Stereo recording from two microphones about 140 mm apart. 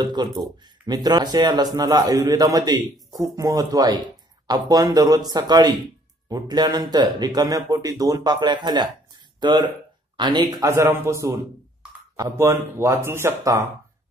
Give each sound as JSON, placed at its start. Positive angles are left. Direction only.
{"t": 0.0, "sound": "speech", "side_deg": -30}
{"t": 10.7, "sound": "speech", "side_deg": -20}